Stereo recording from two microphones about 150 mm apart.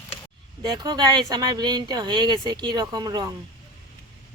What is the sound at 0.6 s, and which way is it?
Speech, 25° right (ahead or behind).